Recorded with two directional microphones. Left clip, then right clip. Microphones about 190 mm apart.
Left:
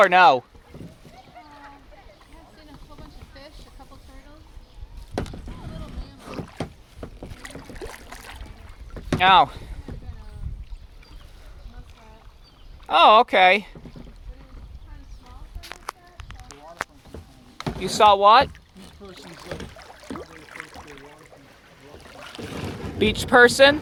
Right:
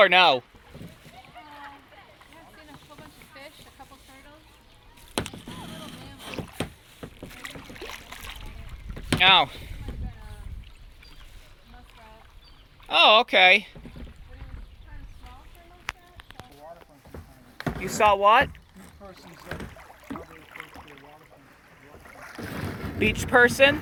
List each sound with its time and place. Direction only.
0.0 s speech: 5° left (ahead or behind)
2.9 s a sound: 5° right (ahead or behind)
5.1 s boat: 10° right (ahead or behind)
7.3 s boat: 40° left (ahead or behind)
9.1 s speech: 10° left (ahead or behind)
12.9 s speech: 15° left (ahead or behind)
17.7 s speech: 15° left (ahead or behind)
19.1 s speech: 45° left (ahead or behind)
19.8 s boat: 45° left (ahead or behind)
22.4 s boat: 35° right (ahead or behind)
23.3 s speech: 25° left (ahead or behind)